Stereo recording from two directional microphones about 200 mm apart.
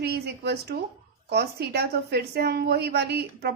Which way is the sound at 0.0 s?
55° right (ahead or behind).